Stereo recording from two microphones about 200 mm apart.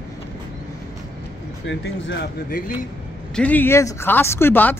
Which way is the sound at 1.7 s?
65° left (ahead or behind).